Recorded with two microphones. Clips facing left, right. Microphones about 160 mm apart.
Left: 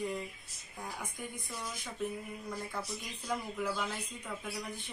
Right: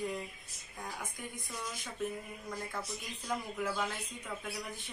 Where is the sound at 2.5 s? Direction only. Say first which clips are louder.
Even; centre (ahead or behind).